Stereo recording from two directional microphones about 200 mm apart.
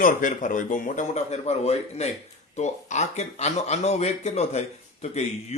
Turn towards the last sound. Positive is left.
turn(degrees=35)  # may be behind; listen again after turning